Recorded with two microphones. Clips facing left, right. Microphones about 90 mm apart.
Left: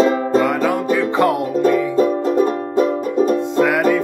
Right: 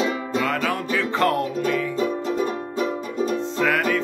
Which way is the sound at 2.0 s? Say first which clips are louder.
Left 8 dB; 50° left (ahead or behind).